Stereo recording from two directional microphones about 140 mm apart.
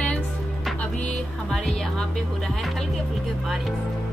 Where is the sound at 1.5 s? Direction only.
5° left (ahead or behind).